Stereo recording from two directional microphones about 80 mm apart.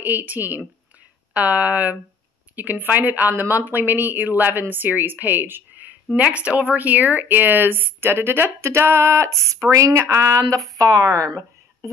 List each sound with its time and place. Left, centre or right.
0.0 s speech: right
10.8 s speech: right